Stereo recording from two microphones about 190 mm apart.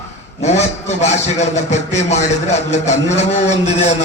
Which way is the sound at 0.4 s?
35° left (ahead or behind).